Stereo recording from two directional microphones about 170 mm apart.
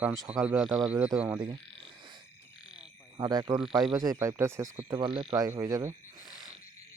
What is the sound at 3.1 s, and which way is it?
Speech, 25° right (ahead or behind).